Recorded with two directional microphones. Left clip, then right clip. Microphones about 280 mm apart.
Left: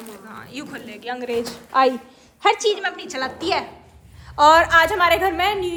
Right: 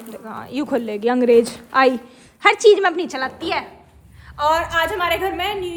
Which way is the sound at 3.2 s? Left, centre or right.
Centre.